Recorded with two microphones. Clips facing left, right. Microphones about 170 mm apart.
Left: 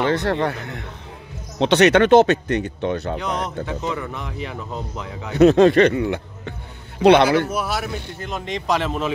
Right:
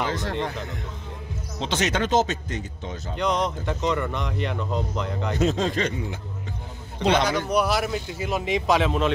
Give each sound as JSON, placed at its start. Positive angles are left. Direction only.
{"t": 0.0, "sound": "a man's voice", "side_deg": 65}
{"t": 3.2, "sound": "speech", "side_deg": 0}
{"t": 5.4, "sound": "speech", "side_deg": 70}
{"t": 7.4, "sound": "speech", "side_deg": 0}